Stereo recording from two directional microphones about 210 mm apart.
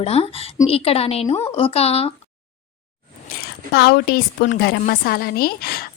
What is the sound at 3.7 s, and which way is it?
A woman's voice, 50° left (ahead or behind).